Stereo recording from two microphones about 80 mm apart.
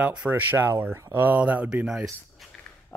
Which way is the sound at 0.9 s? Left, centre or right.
Right.